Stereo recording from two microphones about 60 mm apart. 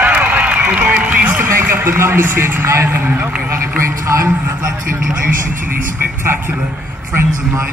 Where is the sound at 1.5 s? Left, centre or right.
Right.